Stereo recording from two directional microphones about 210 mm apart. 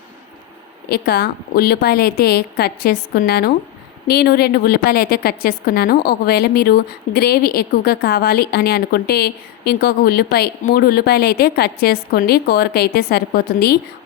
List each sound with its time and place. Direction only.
0.9 s a woman's voice: 45° left (ahead or behind)